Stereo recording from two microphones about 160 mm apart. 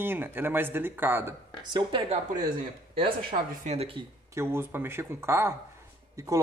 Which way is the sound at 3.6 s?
40° right (ahead or behind).